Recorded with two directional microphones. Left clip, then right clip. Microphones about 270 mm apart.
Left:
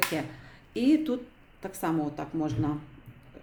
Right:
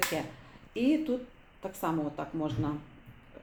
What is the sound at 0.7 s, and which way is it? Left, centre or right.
Speech, centre.